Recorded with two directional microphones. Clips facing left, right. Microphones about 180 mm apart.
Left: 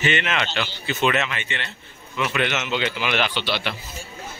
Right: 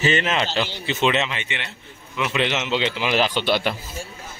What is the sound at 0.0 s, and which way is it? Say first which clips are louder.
A man's voice: right 3 dB; 35° right (ahead or behind).